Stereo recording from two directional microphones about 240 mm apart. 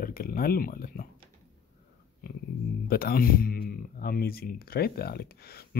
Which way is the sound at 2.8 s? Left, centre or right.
Left.